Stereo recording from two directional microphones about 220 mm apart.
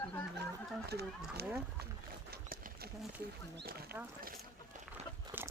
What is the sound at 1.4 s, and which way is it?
Speech, 45° right (ahead or behind).